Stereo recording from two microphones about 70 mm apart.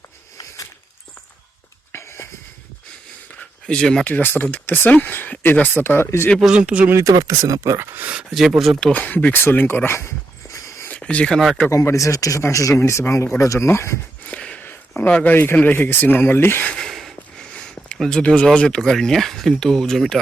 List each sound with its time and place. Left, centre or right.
1.9 s a sound: left
3.7 s speech: centre
4.0 s speech: left
6.4 s speech: centre
7.1 s speech: right
8.3 s speech: centre
8.9 s speech: left
10.8 s a sound: centre
11.7 s speech: left
14.3 s a sound: centre
15.5 s speech: left
16.6 s a sound: centre
17.9 s speech: centre